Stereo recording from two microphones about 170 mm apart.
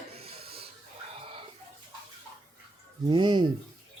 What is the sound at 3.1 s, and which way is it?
Speech, 25° right (ahead or behind).